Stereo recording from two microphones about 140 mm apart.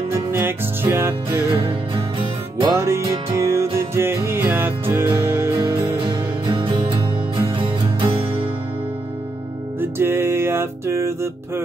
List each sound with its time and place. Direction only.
0.1 s music: 15° right (ahead or behind)
1.5 s music: 40° right (ahead or behind)
2.7 s music: 20° right (ahead or behind)
5.6 s music: 35° right (ahead or behind)
9.8 s music: 15° right (ahead or behind)